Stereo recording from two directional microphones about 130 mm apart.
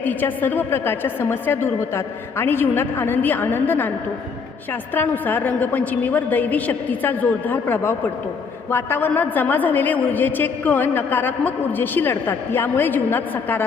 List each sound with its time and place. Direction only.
0.0 s a woman's voice: 15° left (ahead or behind)
4.9 s a woman's voice: 15° left (ahead or behind)